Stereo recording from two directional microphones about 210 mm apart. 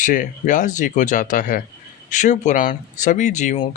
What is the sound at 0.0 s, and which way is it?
Speech, 40° left (ahead or behind).